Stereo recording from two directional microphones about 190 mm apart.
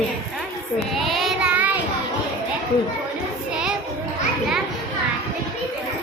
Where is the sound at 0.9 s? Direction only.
Centre (ahead or behind).